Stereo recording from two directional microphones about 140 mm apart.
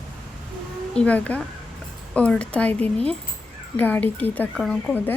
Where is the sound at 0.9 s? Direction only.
10° left (ahead or behind).